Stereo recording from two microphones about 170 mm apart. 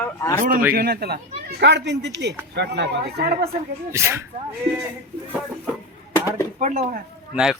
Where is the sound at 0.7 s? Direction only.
65° right (ahead or behind).